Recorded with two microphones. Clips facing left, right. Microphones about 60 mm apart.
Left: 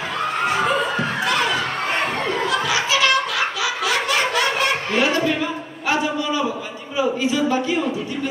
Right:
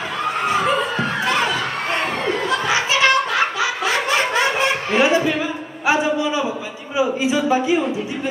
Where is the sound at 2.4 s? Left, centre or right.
Right.